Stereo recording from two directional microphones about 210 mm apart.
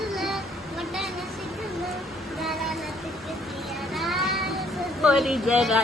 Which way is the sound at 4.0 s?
Centre (ahead or behind).